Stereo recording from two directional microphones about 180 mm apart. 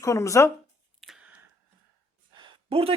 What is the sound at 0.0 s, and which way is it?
Speech, 15° left (ahead or behind).